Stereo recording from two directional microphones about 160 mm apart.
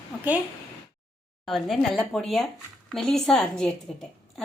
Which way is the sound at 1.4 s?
Centre (ahead or behind).